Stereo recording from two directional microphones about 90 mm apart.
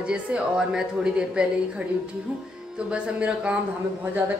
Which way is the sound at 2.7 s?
10° right (ahead or behind).